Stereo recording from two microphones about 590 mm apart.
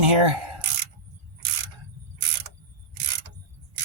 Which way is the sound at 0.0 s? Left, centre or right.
Right.